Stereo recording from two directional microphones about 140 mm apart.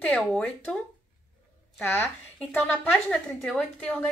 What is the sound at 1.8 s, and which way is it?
A woman's voice, 15° left (ahead or behind).